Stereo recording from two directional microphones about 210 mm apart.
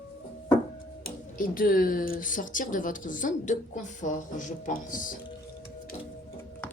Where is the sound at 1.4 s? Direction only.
40° left (ahead or behind).